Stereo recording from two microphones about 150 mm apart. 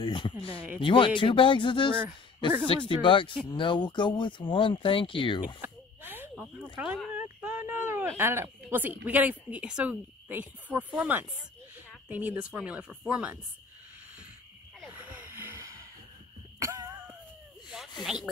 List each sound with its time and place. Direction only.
0.0 s speech: 35° left (ahead or behind)
5.6 s a sound: 15° right (ahead or behind)
7.2 s speech: 10° right (ahead or behind)
14.9 s gasp: 15° right (ahead or behind)
16.5 s throat clearing: 20° right (ahead or behind)
18.0 s speech: 5° right (ahead or behind)